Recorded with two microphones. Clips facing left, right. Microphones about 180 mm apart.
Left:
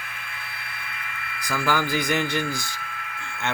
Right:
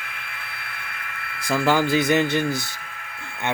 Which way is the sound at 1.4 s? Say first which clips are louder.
Right 5 dB; 25° right (ahead or behind).